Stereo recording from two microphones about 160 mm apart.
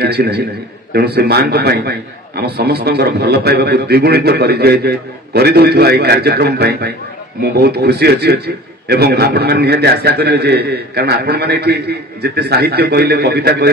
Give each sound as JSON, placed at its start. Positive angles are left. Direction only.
{"t": 0.0, "sound": "a man's voice", "side_deg": -90}